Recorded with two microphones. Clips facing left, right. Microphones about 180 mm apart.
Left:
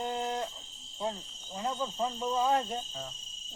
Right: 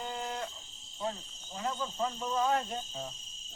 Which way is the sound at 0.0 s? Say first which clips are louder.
Left 5 dB; 40° left (ahead or behind).